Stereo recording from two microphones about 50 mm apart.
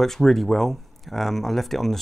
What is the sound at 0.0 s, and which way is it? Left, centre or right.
Speech, centre.